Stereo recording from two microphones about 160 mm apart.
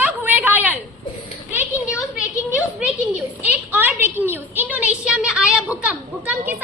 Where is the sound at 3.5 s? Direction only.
10° right (ahead or behind).